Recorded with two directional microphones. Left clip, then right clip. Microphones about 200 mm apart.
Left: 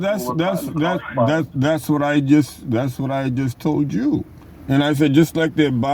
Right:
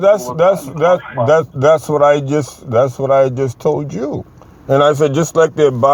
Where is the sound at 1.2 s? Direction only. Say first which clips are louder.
Right 4 dB; 50° left (ahead or behind).